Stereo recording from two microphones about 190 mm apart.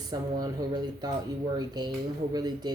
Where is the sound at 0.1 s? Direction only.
20° right (ahead or behind).